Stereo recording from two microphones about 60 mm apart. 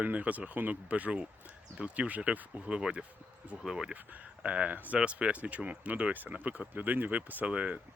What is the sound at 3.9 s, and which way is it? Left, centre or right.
Speech, right.